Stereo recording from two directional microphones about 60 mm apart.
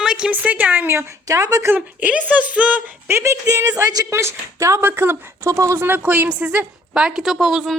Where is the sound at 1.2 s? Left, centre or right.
Right.